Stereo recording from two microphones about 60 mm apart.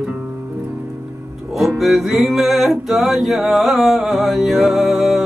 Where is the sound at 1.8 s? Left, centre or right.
Centre.